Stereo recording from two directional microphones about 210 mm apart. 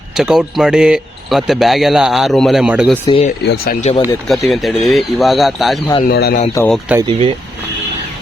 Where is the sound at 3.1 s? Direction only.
30° left (ahead or behind).